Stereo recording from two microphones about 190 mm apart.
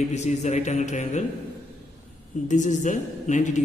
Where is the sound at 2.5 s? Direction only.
40° left (ahead or behind).